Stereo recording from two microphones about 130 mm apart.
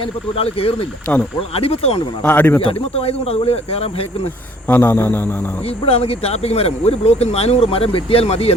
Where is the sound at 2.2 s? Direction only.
15° left (ahead or behind).